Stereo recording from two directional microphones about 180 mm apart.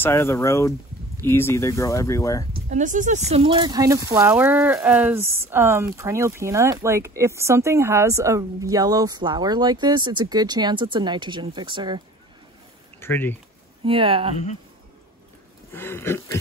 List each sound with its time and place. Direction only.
0.0 s speech: 15° left (ahead or behind)
2.7 s speech: 45° right (ahead or behind); by 12.0 s 25° right (ahead or behind)
13.0 s speech: 10° left (ahead or behind)
13.8 s speech: 30° right (ahead or behind)
15.7 s speech: 15° left (ahead or behind)